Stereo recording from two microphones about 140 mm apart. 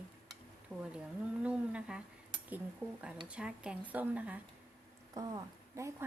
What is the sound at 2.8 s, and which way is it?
A woman's voice, 15° right (ahead or behind).